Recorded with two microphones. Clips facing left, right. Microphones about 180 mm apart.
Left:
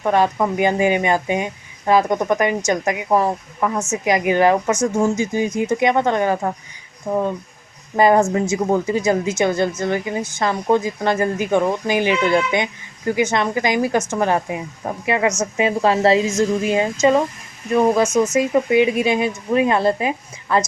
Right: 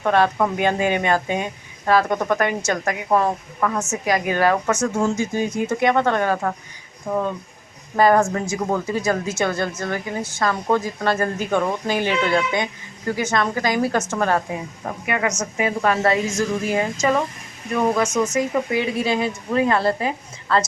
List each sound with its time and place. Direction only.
0.0 s a woman's voice: 15° left (ahead or behind)
15.0 s a woman's voice: 25° left (ahead or behind)